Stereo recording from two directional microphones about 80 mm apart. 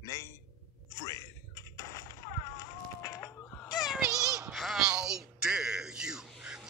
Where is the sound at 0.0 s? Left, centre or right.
Left.